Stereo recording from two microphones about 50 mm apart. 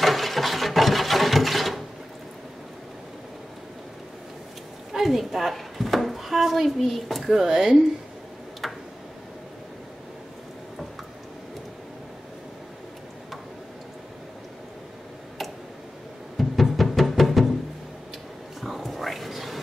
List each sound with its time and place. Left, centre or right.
0.0 s sewing machine: centre
4.9 s a sound: centre
7.4 s speech: centre
16.3 s music: centre
18.6 s whispering: centre